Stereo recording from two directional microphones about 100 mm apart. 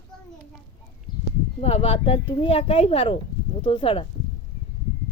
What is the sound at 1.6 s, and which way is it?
Speech, 85° left.